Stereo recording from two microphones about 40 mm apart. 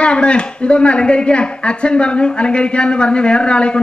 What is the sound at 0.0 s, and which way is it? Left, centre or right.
A woman's voice, left.